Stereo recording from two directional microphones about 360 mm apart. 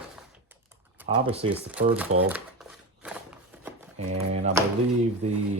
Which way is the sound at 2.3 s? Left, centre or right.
Centre.